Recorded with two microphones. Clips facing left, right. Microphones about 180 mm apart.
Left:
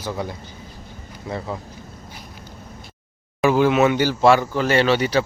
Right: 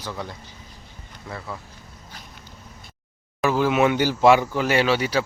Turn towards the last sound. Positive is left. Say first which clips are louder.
# left 3 dB
turn(degrees=-5)  # may be behind; listen again after turning